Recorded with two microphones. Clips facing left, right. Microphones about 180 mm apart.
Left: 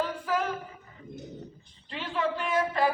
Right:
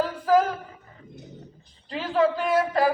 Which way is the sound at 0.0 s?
40° right (ahead or behind).